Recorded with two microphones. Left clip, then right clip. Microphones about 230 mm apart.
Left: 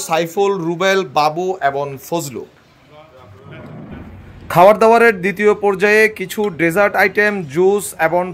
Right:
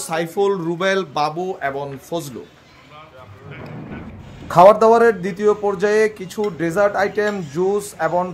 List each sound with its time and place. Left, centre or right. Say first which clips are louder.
0.0 s speech: left 4 dB; centre
4.5 s speech: left 1 dB; left